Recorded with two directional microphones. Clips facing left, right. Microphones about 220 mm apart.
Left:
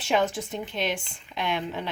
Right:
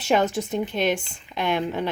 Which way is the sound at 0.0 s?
45° right (ahead or behind).